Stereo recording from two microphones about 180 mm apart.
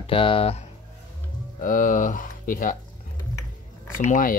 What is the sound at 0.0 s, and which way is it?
Speech, 30° left (ahead or behind).